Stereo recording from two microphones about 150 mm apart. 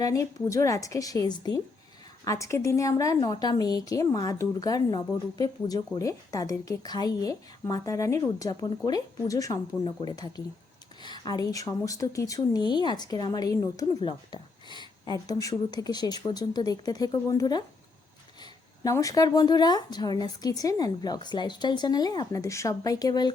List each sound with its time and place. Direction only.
0.0 s a woman's voice: 20° left (ahead or behind)
18.8 s a woman's voice: 20° left (ahead or behind)